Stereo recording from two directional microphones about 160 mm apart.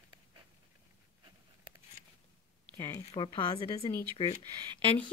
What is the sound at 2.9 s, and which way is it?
A woman's voice, 30° left (ahead or behind).